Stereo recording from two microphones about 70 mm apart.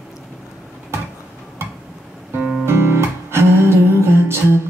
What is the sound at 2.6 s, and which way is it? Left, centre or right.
Music, right.